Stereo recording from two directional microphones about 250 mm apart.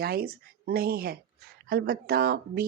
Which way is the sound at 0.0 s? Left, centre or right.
Right.